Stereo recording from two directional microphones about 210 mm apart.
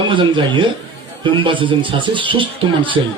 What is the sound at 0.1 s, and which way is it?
A man's voice, 25° right (ahead or behind).